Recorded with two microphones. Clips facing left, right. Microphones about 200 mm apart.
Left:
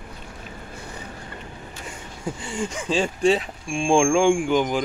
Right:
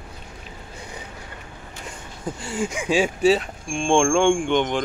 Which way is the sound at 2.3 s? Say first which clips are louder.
Right 4 dB; 5° right (ahead or behind).